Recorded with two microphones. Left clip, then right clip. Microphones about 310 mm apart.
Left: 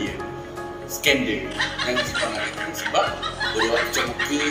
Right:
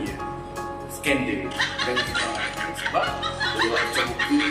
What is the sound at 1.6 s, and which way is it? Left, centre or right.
Music, centre.